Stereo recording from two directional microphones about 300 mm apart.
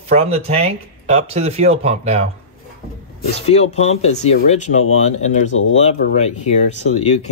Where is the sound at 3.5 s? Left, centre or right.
Left.